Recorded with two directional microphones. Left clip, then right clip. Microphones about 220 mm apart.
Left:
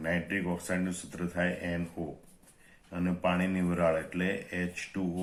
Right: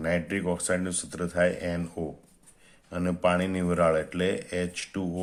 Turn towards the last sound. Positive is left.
turn(degrees=-50)  # may be behind; listen again after turning